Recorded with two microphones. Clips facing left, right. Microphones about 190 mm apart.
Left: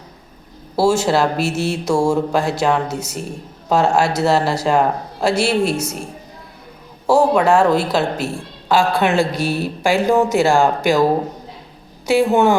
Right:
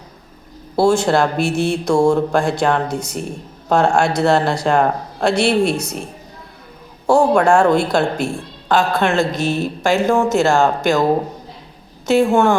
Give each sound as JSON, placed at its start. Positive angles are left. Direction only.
{"t": 0.8, "sound": "speech", "side_deg": 5}
{"t": 7.1, "sound": "a man's voice", "side_deg": 5}
{"t": 12.0, "sound": "a man's voice", "side_deg": 15}